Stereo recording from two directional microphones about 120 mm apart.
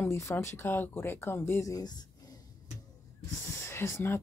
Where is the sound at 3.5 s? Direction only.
25° left (ahead or behind).